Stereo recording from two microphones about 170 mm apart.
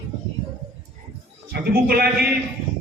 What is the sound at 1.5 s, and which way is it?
Speech, 65° right (ahead or behind).